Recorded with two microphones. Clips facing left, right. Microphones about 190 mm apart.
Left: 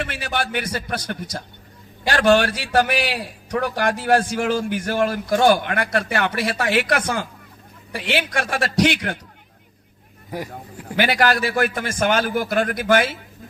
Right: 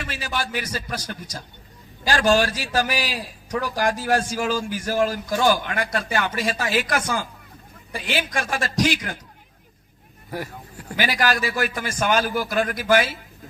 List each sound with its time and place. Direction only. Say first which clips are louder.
0.0 s a man's voice: left 3 dB; 60° left (ahead or behind)
10.9 s a man's voice: left 4 dB; 55° left (ahead or behind)